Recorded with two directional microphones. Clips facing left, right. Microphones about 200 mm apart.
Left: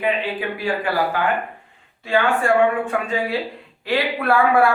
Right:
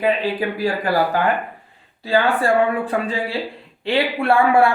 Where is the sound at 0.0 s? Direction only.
40° right (ahead or behind).